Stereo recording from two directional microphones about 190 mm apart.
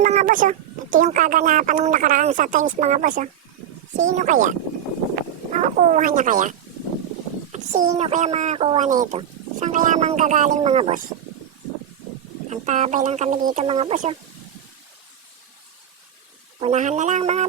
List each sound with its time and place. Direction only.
0.0 s speech: 40° right (ahead or behind)
12.5 s speech: 35° right (ahead or behind)
13.7 s speech: 30° right (ahead or behind)
16.6 s speech: 35° right (ahead or behind)